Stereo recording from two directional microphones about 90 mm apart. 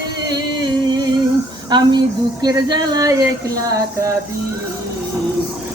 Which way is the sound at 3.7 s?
35° right (ahead or behind).